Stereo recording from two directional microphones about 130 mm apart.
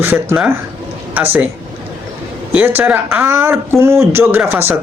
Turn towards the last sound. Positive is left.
turn(degrees=-15)  # may be behind; listen again after turning